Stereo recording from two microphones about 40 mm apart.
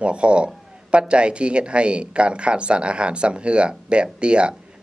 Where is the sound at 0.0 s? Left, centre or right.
Right.